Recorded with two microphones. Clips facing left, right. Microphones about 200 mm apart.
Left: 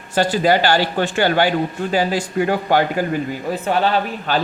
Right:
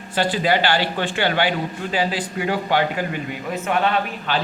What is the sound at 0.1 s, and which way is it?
A man's voice, 45° left (ahead or behind).